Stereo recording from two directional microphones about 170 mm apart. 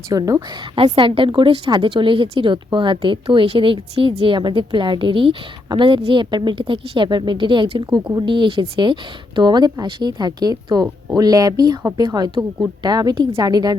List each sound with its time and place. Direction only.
0.1 s a woman's voice: 20° right (ahead or behind)
0.8 s a woman's voice: 30° right (ahead or behind)